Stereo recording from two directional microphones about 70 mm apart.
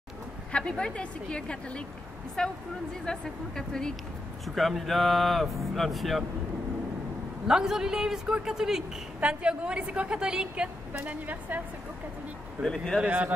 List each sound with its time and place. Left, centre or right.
0.5 s a woman's voice: centre
7.4 s a woman's voice: centre
11.1 s a woman's voice: right
12.6 s a woman's voice: centre
13.0 s a woman's voice: right